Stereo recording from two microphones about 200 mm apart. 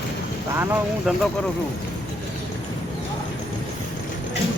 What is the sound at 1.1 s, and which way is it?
Speech, centre (ahead or behind).